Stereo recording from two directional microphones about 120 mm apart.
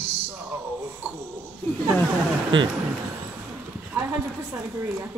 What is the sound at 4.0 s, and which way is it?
Speech, 15° right (ahead or behind).